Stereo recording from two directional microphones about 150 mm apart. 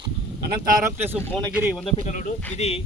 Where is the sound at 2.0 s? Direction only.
50° left (ahead or behind).